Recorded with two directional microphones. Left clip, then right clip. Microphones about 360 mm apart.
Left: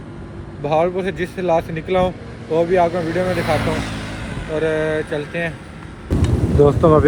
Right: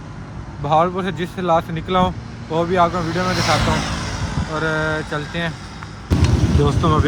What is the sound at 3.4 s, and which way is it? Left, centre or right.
Speech, right.